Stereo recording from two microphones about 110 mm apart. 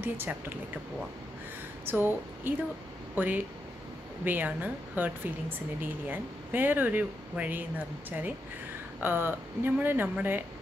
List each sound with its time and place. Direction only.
0.0 s a woman's voice: 15° right (ahead or behind)
1.9 s a woman's voice: 20° right (ahead or behind)
9.0 s a woman's voice: 20° right (ahead or behind)